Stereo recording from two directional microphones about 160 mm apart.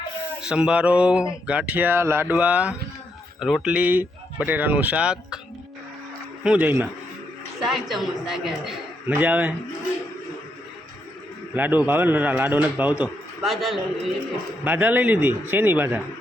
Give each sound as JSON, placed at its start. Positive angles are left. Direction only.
{"t": 0.4, "sound": "speech", "side_deg": -5}
{"t": 6.4, "sound": "speech", "side_deg": -10}
{"t": 7.6, "sound": "a man's voice", "side_deg": 0}
{"t": 11.5, "sound": "speech", "side_deg": -10}
{"t": 13.4, "sound": "a man's voice", "side_deg": 0}